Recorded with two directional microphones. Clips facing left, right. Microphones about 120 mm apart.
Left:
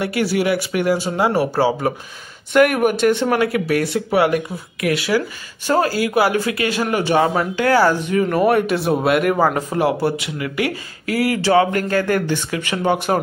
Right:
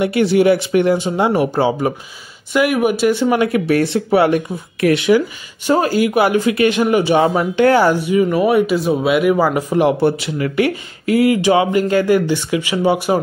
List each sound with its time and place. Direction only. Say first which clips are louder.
0.0 s speech: right 6 dB; 20° right (ahead or behind)
2.5 s speech: left 1 dB; 5° right (ahead or behind)
3.3 s speech: right 3 dB; 25° right (ahead or behind); by 13.2 s 10° right (ahead or behind)